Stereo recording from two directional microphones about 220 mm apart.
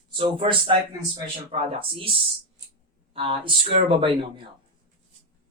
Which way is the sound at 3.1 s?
25° right (ahead or behind).